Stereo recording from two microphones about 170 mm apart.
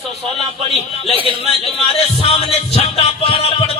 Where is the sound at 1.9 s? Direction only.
35° left (ahead or behind).